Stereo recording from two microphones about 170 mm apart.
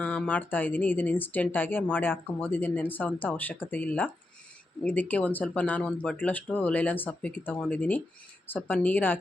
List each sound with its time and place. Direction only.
0.0 s speech: 10° left (ahead or behind)